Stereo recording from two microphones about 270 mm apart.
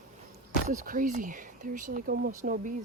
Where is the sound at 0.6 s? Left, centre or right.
Right.